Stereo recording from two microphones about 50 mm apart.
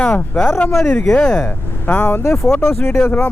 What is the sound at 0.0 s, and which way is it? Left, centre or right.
Speech, centre.